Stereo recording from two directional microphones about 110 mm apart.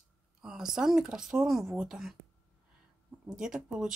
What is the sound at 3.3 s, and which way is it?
Speech, 5° right (ahead or behind).